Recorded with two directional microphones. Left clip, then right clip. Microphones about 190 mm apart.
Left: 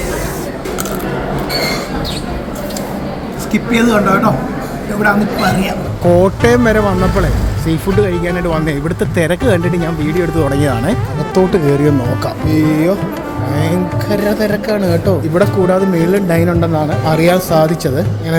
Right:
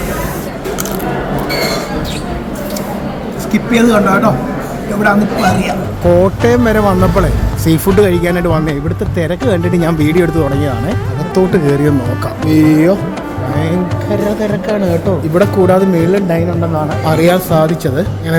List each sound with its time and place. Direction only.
3.5 s speech: centre (ahead or behind)
7.7 s speech: 20° right (ahead or behind)
8.4 s speech: 5° right (ahead or behind)
9.1 s speech: 5° left (ahead or behind)
9.7 s speech: 15° right (ahead or behind)
10.3 s speech: centre (ahead or behind)
12.5 s speech: 15° right (ahead or behind)
13.6 s speech: centre (ahead or behind)